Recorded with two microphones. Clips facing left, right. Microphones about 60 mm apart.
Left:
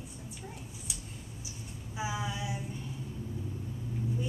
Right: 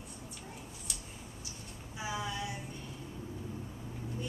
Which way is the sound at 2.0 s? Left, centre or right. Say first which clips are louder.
Left 2 dB; centre.